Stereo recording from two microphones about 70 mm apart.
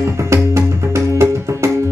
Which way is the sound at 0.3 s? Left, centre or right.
Right.